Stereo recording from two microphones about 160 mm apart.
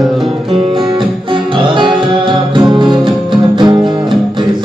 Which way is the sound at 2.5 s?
30° right (ahead or behind).